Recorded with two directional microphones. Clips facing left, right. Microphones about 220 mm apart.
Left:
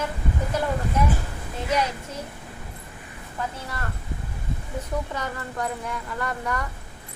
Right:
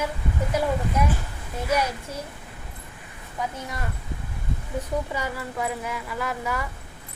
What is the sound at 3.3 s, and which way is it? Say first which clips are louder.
Speech: right 1 dB; 15° right (ahead or behind).